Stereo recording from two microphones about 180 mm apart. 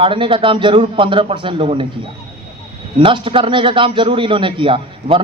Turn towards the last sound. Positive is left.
turn(degrees=-30)  # may be behind; listen again after turning